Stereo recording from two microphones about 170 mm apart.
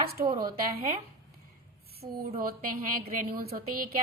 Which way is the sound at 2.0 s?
30° right (ahead or behind).